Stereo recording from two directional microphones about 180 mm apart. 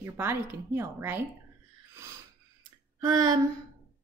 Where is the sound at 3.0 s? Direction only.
20° right (ahead or behind).